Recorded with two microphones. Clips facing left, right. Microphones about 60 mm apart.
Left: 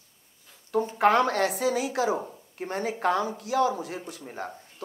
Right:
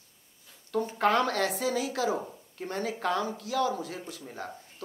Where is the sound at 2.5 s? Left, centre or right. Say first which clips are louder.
Left 3 dB; left.